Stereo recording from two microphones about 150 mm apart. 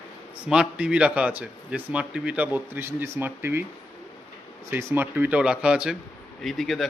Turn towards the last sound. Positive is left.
turn(degrees=0)  # may be behind; listen again after turning